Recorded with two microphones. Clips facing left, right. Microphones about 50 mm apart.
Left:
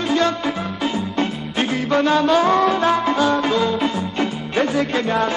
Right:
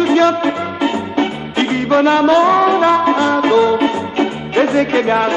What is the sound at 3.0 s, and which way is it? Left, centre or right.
Music, right.